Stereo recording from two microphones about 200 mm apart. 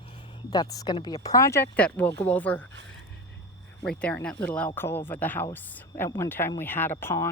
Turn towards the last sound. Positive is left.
turn(degrees=15)  # may be behind; listen again after turning